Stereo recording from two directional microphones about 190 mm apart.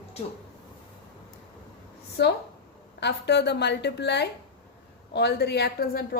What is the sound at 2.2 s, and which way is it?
Speech, 65° left (ahead or behind).